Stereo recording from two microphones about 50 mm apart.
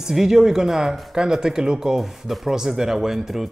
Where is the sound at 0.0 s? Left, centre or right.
Centre.